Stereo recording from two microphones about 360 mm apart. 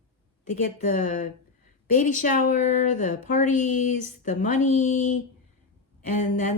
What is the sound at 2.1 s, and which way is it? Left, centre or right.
Speech, left.